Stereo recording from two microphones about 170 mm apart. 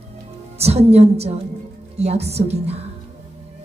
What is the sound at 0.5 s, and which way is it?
A woman's voice, 40° right (ahead or behind).